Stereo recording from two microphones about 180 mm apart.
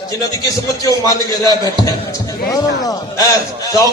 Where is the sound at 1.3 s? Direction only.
20° right (ahead or behind).